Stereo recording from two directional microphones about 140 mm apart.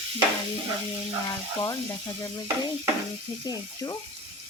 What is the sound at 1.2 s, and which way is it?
Speech, 25° left (ahead or behind).